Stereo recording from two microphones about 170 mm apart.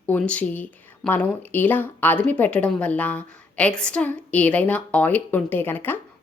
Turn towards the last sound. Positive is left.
turn(degrees=10)  # may be behind; listen again after turning